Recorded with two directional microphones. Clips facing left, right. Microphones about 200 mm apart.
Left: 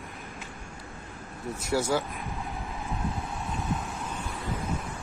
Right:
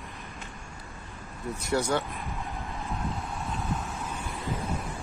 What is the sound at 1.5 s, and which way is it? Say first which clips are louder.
Speech: even; centre (ahead or behind).